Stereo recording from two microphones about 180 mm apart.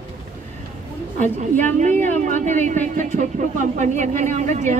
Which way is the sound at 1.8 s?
40° right (ahead or behind).